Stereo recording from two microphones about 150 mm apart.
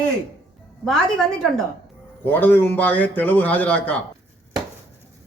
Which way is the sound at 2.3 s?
10° left (ahead or behind).